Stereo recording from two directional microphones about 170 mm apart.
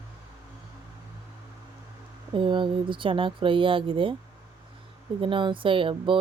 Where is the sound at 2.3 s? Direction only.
30° right (ahead or behind).